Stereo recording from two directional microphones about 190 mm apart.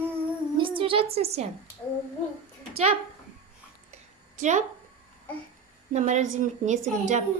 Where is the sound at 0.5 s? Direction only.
25° right (ahead or behind).